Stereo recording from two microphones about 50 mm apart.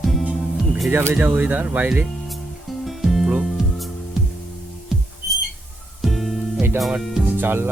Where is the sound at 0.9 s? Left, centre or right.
Right.